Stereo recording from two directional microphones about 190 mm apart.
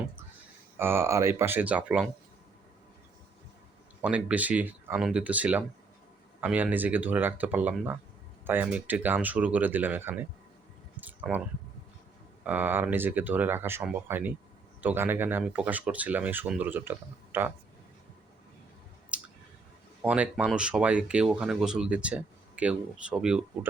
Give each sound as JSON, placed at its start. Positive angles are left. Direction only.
{"t": 0.8, "sound": "speech", "side_deg": -10}
{"t": 4.0, "sound": "speech", "side_deg": -5}
{"t": 12.5, "sound": "speech", "side_deg": -10}
{"t": 19.1, "sound": "a sound", "side_deg": -5}
{"t": 20.0, "sound": "speech", "side_deg": -5}